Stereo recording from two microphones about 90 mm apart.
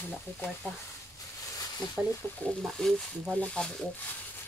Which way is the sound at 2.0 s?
5° right (ahead or behind).